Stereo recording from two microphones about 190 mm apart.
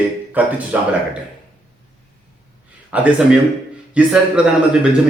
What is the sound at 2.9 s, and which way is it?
A man's voice, 5° right (ahead or behind).